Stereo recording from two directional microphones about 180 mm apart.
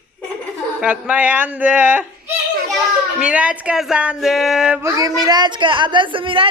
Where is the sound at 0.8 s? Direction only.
5° right (ahead or behind).